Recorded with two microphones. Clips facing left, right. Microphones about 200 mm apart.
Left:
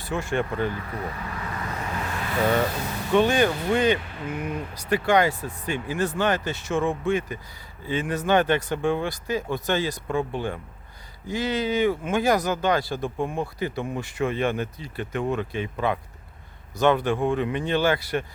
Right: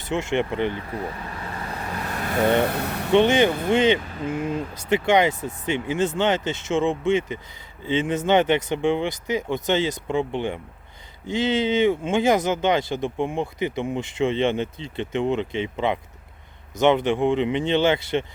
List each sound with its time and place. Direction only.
0.0 s speech: 25° right (ahead or behind)
2.1 s vehicle: 45° right (ahead or behind)
2.6 s speech: 65° right (ahead or behind)
3.1 s speech: 20° right (ahead or behind)